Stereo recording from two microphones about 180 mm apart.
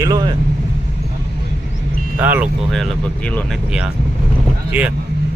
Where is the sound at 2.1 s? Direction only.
10° right (ahead or behind).